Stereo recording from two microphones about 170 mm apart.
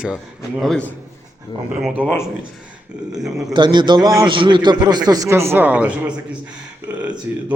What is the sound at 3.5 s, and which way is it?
A man's voice, 25° right (ahead or behind).